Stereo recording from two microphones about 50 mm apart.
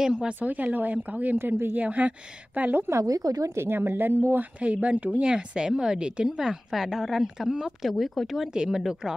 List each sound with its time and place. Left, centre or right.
0.0 s a woman's voice: centre
0.4 s a woman's voice: right
2.9 s a woman's voice: right
3.6 s speech: right
4.6 s a woman's voice: right
5.3 s a woman's voice: centre
7.9 s a woman's voice: centre